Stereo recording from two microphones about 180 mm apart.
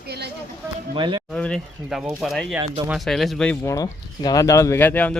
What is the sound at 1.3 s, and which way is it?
Speech, 5° left (ahead or behind).